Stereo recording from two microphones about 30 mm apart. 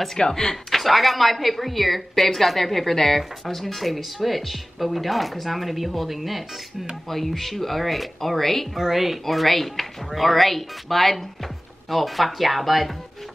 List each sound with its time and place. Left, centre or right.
0.1 s speech: centre
0.7 s speech: centre
7.1 s speech: centre
8.7 s speech: centre
9.2 s speech: centre